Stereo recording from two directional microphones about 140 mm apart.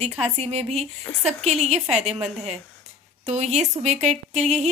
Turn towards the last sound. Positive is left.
turn(degrees=-55)  # may be behind; listen again after turning